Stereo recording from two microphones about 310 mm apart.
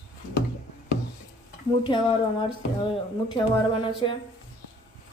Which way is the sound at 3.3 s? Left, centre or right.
Centre.